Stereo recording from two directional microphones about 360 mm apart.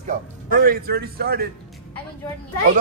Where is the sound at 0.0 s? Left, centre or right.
Right.